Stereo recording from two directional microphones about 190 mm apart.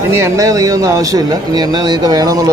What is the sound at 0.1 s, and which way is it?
Speech, 15° right (ahead or behind).